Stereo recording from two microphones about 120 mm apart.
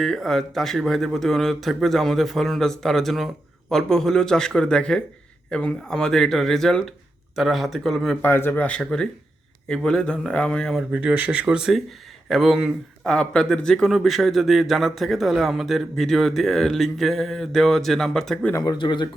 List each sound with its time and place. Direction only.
0.0 s a man's voice: 5° left (ahead or behind)
8.2 s speech: 15° left (ahead or behind)
10.9 s a man's voice: 10° right (ahead or behind)
18.5 s speech: 35° left (ahead or behind)